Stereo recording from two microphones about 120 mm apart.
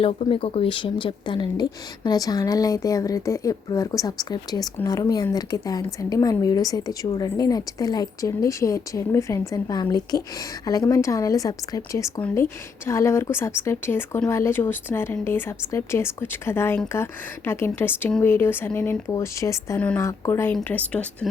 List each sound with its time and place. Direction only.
0.0 s a woman's voice: 50° left (ahead or behind); by 21.2 s 10° left (ahead or behind)